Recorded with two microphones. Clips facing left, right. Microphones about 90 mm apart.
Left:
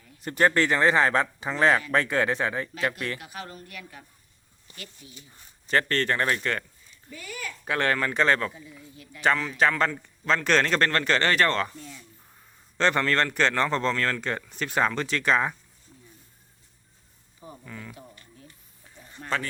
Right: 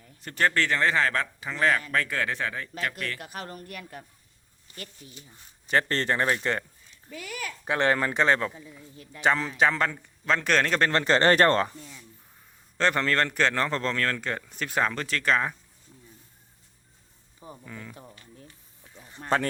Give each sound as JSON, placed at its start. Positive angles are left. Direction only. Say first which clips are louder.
{"t": 0.2, "sound": "speech", "louder": "left 3 dB", "side_deg": 20}
{"t": 3.2, "sound": "speech", "louder": "right 1 dB", "side_deg": -45}
{"t": 5.9, "sound": "speech", "louder": "even", "side_deg": -25}
{"t": 7.1, "sound": "speech", "louder": "right 1 dB", "side_deg": -75}
{"t": 7.6, "sound": "speech", "louder": "right 1 dB", "side_deg": -20}
{"t": 9.6, "sound": "speech", "louder": "left 1 dB", "side_deg": -5}
{"t": 10.9, "sound": "speech", "louder": "right 3 dB", "side_deg": -30}
{"t": 12.7, "sound": "speech", "louder": "left 1 dB", "side_deg": 0}
{"t": 17.7, "sound": "speech", "louder": "left 1 dB", "side_deg": -5}
{"t": 18.9, "sound": "a sound", "louder": "even", "side_deg": -10}
{"t": 19.2, "sound": "speech", "louder": "right 4 dB", "side_deg": -40}